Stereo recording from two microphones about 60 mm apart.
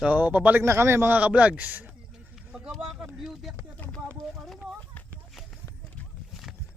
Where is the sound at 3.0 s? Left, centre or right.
Centre.